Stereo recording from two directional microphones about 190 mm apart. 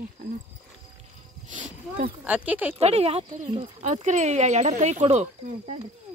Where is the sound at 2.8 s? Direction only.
35° right (ahead or behind).